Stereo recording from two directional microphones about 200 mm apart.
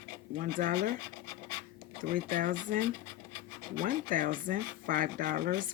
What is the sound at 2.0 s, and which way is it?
Speech, 40° right (ahead or behind).